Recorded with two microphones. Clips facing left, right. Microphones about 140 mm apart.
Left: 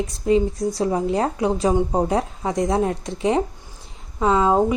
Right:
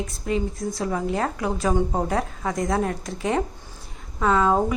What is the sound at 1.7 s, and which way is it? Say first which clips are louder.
Speech: left 3 dB; 15° left (ahead or behind).